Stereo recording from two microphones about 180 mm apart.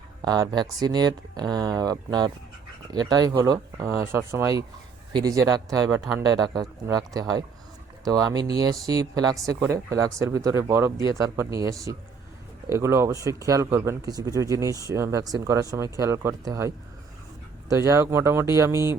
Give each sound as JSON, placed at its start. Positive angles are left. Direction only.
{"t": 0.2, "sound": "speech", "side_deg": -20}